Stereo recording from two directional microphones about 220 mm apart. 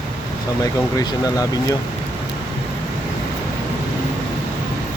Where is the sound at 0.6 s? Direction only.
15° left (ahead or behind).